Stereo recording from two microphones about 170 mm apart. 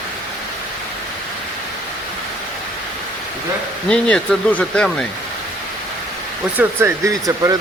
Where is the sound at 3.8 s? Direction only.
5° left (ahead or behind).